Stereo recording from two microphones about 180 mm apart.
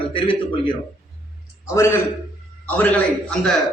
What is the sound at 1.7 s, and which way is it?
A man's voice, 15° left (ahead or behind).